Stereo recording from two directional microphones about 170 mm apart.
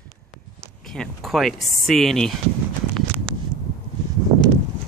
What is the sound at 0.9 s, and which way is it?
Speech, centre (ahead or behind).